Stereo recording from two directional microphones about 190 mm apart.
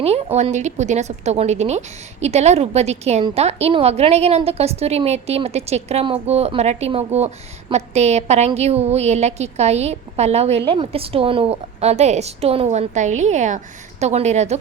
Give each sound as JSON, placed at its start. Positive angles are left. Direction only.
{"t": 0.0, "sound": "a woman's voice", "side_deg": -35}